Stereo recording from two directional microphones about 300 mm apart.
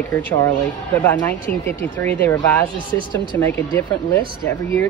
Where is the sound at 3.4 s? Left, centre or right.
Centre.